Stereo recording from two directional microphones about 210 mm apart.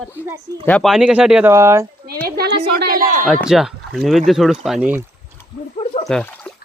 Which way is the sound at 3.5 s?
Centre (ahead or behind).